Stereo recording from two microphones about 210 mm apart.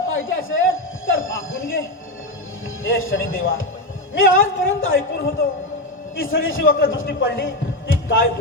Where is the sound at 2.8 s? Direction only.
70° left (ahead or behind).